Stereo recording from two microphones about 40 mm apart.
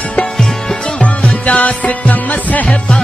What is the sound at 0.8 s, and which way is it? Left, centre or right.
Music, left.